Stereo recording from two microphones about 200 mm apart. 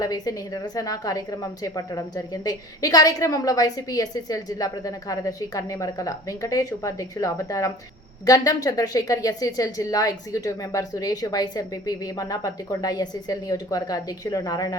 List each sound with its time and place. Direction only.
0.0 s a woman's voice: 20° left (ahead or behind)